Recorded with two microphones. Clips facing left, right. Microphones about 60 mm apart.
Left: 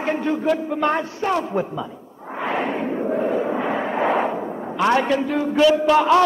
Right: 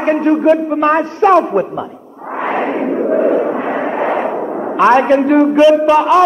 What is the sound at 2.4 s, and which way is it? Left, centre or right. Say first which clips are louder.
Battle cry: right 6 dB; right.